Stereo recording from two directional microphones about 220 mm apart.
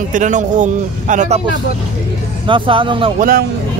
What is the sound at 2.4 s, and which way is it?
Speech, 25° right (ahead or behind).